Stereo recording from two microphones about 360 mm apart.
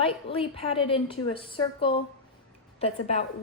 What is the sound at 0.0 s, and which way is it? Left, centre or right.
A woman's voice, centre.